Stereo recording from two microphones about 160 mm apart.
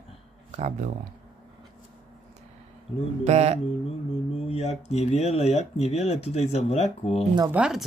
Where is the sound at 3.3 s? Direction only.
45° right (ahead or behind).